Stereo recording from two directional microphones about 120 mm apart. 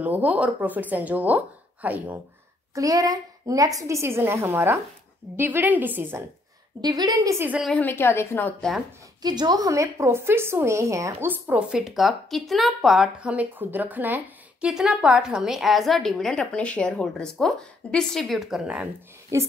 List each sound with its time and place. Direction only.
0.0 s a woman's voice: 15° right (ahead or behind)
2.7 s a woman's voice: 30° right (ahead or behind)
6.8 s a woman's voice: 35° right (ahead or behind)
7.7 s a woman's voice: 15° left (ahead or behind)
9.2 s a woman's voice: 35° right (ahead or behind); by 18.9 s 5° right (ahead or behind)
19.3 s a woman's voice: 25° right (ahead or behind)